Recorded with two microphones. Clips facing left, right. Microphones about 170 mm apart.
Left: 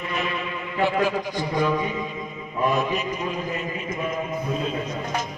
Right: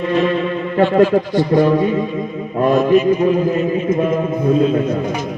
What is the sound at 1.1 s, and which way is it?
Speech, 50° right (ahead or behind).